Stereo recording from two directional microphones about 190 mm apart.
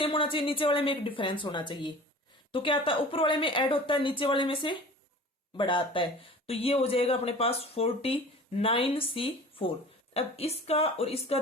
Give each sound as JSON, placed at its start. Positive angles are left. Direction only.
{"t": 0.0, "sound": "a woman's voice", "side_deg": 30}